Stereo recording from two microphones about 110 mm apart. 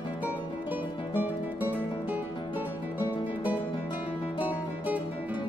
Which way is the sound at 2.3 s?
45° left (ahead or behind).